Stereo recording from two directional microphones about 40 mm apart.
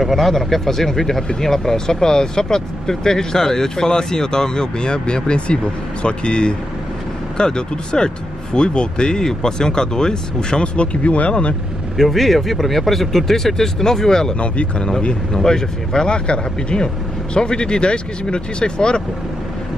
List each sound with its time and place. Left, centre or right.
0.0 s speech: centre; by 11.3 s left
12.0 s speech: centre
14.4 s speech: left